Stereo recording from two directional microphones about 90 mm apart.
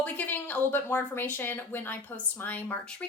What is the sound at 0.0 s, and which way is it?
A woman's voice, 20° left (ahead or behind).